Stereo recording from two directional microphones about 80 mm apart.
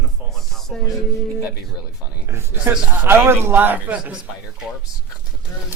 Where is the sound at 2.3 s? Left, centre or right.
Right; by 4.2 s centre.